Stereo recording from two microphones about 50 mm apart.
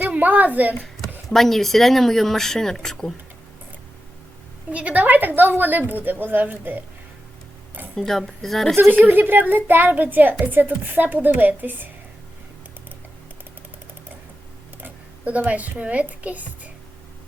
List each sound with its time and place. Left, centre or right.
0.1 s a woman's voice: right
1.3 s speech: centre
4.7 s a woman's voice: right
7.9 s a woman's voice: centre
8.7 s a woman's voice: right
15.2 s a woman's voice: right